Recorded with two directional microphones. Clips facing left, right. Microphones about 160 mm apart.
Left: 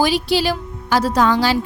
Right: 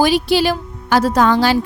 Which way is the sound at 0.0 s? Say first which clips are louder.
Right 3 dB; 55° right (ahead or behind).